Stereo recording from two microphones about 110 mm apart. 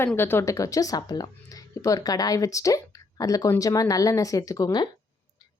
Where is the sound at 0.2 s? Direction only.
20° left (ahead or behind).